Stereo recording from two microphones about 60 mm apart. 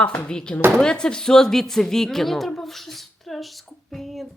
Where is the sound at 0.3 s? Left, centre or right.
Centre.